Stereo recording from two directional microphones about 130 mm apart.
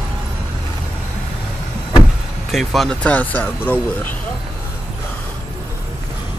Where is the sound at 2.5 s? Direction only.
Centre (ahead or behind).